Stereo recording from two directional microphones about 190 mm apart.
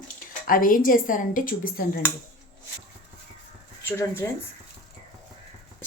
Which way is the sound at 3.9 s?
15° left (ahead or behind).